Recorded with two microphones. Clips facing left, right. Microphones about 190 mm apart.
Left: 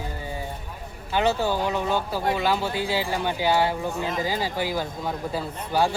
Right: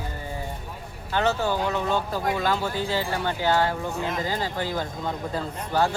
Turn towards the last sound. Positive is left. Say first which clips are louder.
# even
turn(degrees=10)  # may be behind; listen again after turning